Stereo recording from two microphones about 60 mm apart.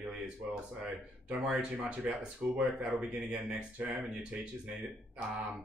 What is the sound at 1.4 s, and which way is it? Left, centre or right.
Speech, right.